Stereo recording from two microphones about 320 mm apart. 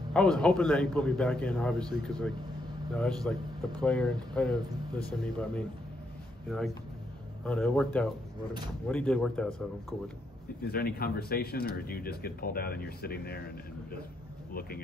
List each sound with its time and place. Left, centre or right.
0.1 s speech: centre
7.4 s speech: centre
10.7 s speech: left
14.5 s speech: left